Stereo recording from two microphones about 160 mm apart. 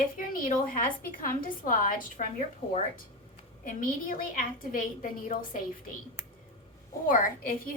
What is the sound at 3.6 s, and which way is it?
A woman's voice, 55° left (ahead or behind).